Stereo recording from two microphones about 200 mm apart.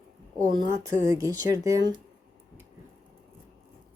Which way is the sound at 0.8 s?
15° right (ahead or behind).